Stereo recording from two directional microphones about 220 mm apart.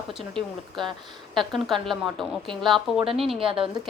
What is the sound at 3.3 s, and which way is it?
Speech, 25° right (ahead or behind).